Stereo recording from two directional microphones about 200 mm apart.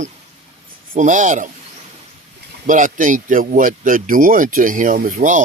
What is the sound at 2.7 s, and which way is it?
Speech, 40° right (ahead or behind).